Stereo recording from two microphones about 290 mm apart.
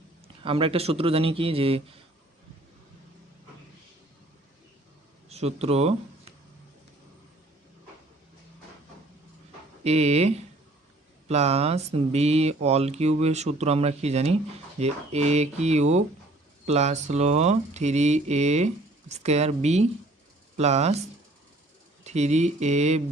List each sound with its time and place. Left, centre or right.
0.4 s speech: centre
5.3 s speech: right
9.8 s speech: right
22.0 s speech: right